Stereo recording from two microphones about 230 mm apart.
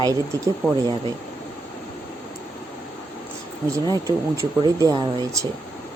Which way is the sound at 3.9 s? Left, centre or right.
Centre.